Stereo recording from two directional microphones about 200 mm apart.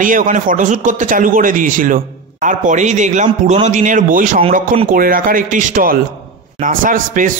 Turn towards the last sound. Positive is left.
turn(degrees=-40)  # may be behind; listen again after turning